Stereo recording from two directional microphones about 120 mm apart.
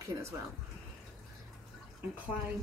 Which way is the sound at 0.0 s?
25° right (ahead or behind).